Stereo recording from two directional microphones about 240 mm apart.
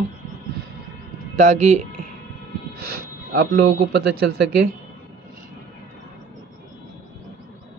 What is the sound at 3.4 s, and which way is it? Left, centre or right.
Speech, right.